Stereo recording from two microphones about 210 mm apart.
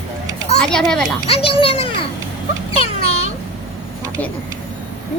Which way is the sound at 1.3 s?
25° left (ahead or behind).